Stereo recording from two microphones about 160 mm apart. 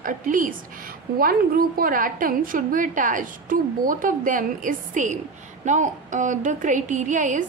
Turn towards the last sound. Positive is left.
turn(degrees=-50)  # may be behind; listen again after turning